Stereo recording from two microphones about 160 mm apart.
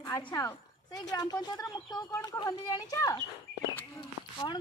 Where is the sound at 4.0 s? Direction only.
30° left (ahead or behind).